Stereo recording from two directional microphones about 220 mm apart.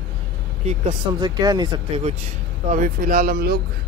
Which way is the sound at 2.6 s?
35° right (ahead or behind).